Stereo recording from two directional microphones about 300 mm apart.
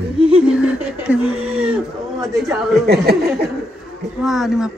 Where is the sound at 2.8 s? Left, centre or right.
Right.